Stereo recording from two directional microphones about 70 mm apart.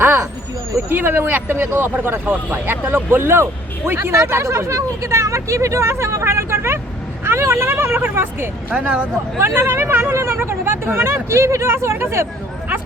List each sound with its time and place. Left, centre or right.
0.9 s speech: right
8.7 s speech: centre
9.4 s speech: right